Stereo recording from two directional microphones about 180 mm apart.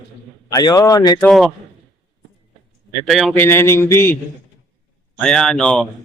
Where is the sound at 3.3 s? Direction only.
15° left (ahead or behind).